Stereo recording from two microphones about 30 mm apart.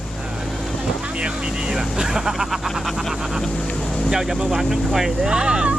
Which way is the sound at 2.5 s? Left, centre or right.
Centre.